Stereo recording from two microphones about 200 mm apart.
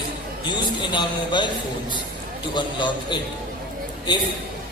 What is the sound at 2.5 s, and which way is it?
Speech, 25° left (ahead or behind).